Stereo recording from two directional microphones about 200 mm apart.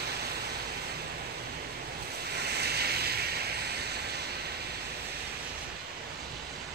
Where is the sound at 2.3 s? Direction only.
55° right (ahead or behind).